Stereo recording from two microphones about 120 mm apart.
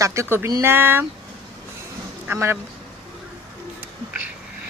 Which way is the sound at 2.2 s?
20° right (ahead or behind).